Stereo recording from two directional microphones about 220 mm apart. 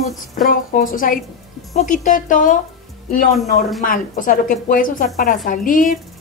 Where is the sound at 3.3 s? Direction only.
Centre (ahead or behind).